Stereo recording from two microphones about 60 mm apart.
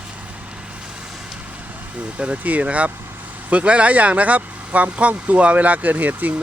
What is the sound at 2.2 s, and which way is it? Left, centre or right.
Speech, right.